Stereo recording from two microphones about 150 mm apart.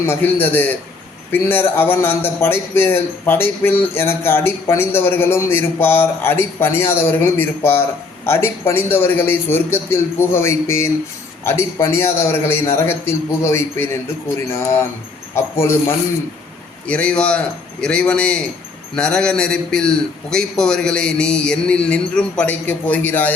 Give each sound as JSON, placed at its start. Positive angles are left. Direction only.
{"t": 0.0, "sound": "a man's voice", "side_deg": 15}